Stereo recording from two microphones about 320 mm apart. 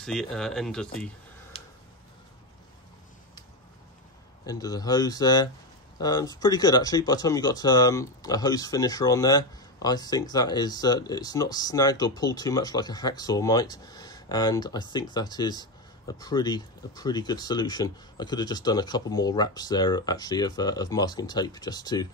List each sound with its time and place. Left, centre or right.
0.0 s speech: centre
1.5 s tick-tock: centre
4.5 s speech: centre